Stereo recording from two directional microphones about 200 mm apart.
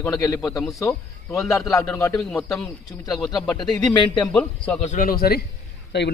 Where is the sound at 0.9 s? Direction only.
15° left (ahead or behind).